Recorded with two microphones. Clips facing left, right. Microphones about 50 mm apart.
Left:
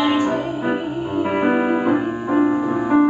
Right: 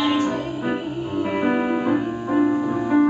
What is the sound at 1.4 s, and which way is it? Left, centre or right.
Music, centre.